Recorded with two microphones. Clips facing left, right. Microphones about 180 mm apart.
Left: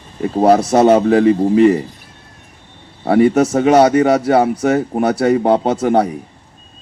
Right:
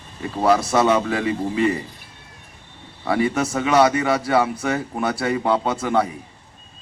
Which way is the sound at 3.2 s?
50° left (ahead or behind).